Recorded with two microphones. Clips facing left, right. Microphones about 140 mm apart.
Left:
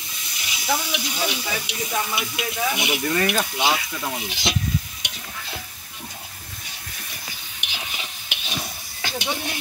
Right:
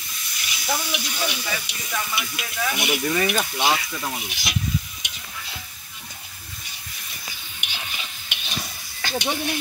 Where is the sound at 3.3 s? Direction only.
10° left (ahead or behind).